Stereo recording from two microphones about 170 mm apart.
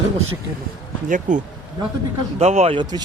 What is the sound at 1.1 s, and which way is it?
Speech, 50° right (ahead or behind).